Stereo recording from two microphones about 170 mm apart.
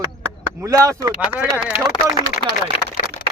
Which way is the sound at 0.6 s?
20° right (ahead or behind).